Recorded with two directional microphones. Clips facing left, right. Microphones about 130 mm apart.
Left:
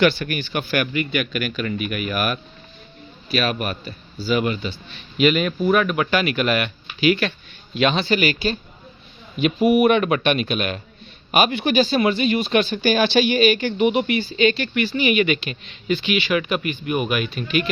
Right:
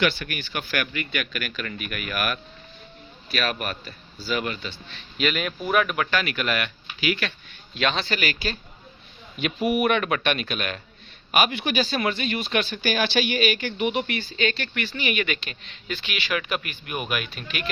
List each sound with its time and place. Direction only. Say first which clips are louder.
0.0 s speech: left 6 dB; 30° left (ahead or behind)
3.3 s speech: left 5 dB; 15° left (ahead or behind)
5.6 s speech: left 4 dB; 5° right (ahead or behind)
6.1 s speech: left 6 dB; 15° left (ahead or behind)
7.7 s speech: left 6 dB; 15° left (ahead or behind); by 11.9 s 30° left (ahead or behind)
11.9 s speech: left 7 dB; 15° left (ahead or behind); by 17.7 s centre (ahead or behind)